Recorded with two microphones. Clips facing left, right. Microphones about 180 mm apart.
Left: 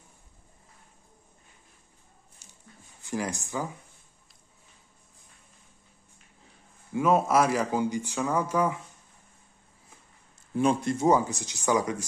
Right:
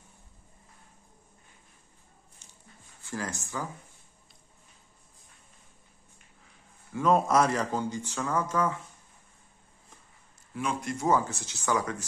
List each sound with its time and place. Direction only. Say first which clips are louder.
3.0 s speech: left 4 dB; 15° left (ahead or behind)
7.0 s speech: left 1 dB; 5° left (ahead or behind)
10.5 s speech: left 7 dB; 30° left (ahead or behind); by 12.0 s 15° left (ahead or behind)